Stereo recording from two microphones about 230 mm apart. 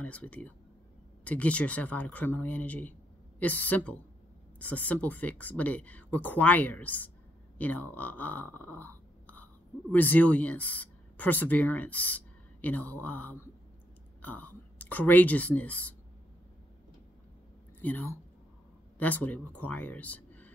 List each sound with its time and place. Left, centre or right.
0.0 s speech: centre
17.8 s speech: centre